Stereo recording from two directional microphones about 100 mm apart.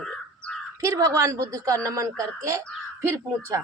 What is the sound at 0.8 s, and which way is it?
A woman's voice, 35° right (ahead or behind).